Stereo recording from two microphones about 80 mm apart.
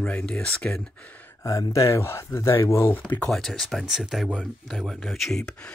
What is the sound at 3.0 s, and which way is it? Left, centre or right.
Speech, centre.